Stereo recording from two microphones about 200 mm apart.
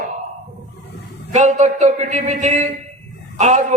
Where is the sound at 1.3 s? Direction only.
35° right (ahead or behind).